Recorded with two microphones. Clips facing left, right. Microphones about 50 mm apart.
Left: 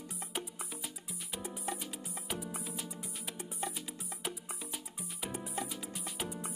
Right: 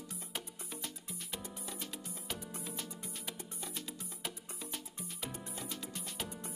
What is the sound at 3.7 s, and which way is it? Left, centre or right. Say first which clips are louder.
Music: left 1 dB; centre.